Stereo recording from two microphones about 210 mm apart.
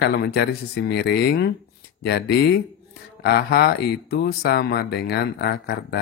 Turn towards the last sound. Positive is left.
turn(degrees=50)  # may be behind; listen again after turning